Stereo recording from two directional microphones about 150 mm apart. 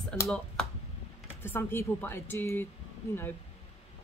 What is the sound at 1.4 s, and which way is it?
A man's voice, 15° left (ahead or behind).